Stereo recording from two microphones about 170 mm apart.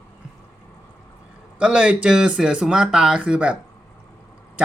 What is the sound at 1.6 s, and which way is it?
Speech, 5° right (ahead or behind).